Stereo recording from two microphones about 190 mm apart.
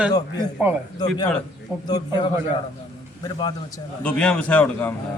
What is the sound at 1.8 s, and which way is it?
A man's voice, 20° left (ahead or behind).